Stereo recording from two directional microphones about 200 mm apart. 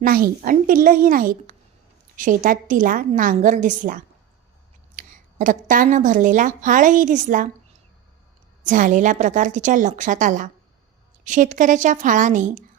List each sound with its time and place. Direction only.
0.0 s a woman's voice: 45° right (ahead or behind)
8.6 s a woman's voice: 40° right (ahead or behind)